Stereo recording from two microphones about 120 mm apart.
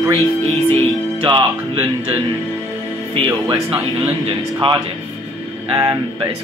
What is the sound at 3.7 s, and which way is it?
Speech, 15° right (ahead or behind).